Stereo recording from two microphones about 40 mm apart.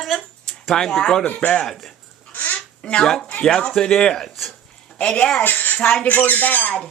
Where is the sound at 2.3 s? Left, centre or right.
Left.